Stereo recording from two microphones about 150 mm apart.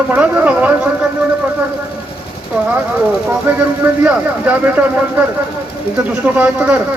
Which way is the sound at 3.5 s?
10° right (ahead or behind).